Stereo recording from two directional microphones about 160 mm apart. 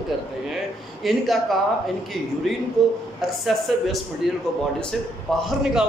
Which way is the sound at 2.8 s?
Centre (ahead or behind).